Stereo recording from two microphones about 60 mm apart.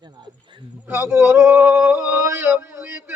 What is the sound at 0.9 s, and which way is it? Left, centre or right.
Speech, right.